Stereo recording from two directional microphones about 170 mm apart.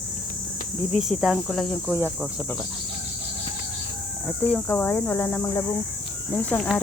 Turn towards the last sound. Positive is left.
turn(degrees=10)  # may be behind; listen again after turning